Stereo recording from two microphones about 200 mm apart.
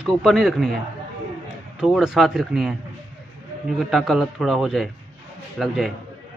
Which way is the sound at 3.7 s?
Centre (ahead or behind).